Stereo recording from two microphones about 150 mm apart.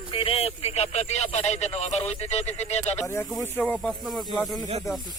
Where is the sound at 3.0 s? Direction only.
15° left (ahead or behind).